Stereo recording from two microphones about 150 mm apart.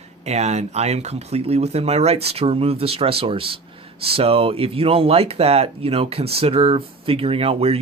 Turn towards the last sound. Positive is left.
turn(degrees=-40)  # may be behind; listen again after turning